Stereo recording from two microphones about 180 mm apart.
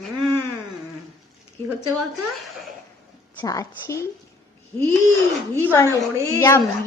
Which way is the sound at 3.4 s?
20° left (ahead or behind).